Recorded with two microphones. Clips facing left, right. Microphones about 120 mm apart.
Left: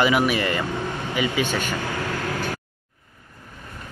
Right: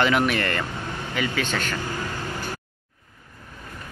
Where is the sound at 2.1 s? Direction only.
90° left.